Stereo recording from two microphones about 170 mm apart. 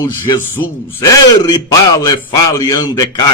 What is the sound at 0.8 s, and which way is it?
Speech, 15° left (ahead or behind).